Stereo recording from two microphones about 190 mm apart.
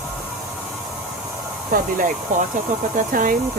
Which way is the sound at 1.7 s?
50° right (ahead or behind).